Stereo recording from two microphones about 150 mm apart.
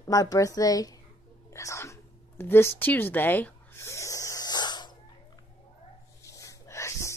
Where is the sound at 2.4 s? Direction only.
15° left (ahead or behind).